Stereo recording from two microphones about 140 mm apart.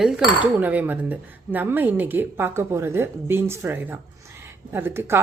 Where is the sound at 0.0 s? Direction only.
5° right (ahead or behind).